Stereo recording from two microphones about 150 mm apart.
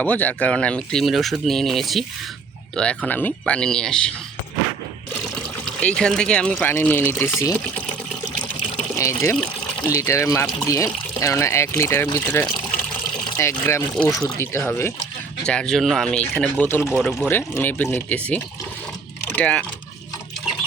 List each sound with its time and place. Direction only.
0.0 s speech: 10° left (ahead or behind)
5.6 s speech: 5° left (ahead or behind)
9.0 s speech: 20° left (ahead or behind)
9.3 s water: 5° left (ahead or behind)
9.9 s speech: 20° left (ahead or behind)
13.9 s speech: 5° left (ahead or behind)
14.3 s speech: 15° left (ahead or behind)
15.4 s speech: 5° left (ahead or behind)
16.9 s speech: 5° right (ahead or behind)
17.2 s speech: 15° left (ahead or behind)